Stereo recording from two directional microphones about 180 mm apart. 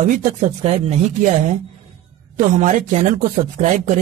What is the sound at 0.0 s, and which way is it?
Speech, 45° right (ahead or behind).